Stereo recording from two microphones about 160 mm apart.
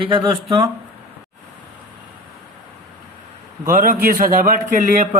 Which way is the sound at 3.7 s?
60° right (ahead or behind).